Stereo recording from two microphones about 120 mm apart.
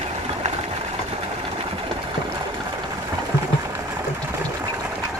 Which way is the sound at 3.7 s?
25° right (ahead or behind).